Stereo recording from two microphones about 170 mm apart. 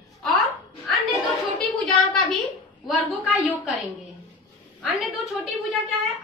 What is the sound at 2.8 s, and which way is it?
A woman's voice, centre (ahead or behind).